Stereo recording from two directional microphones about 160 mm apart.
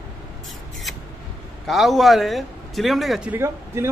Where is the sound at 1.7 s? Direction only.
Centre (ahead or behind).